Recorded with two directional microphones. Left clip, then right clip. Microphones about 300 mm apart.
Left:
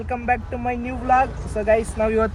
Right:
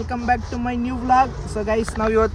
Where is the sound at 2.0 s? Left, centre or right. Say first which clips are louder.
Right 4 dB; right.